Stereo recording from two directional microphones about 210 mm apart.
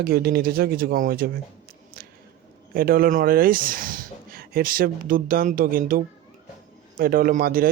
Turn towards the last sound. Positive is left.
turn(degrees=-45)  # may be behind; listen again after turning